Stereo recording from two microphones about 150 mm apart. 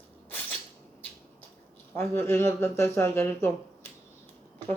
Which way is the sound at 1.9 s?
15° left (ahead or behind).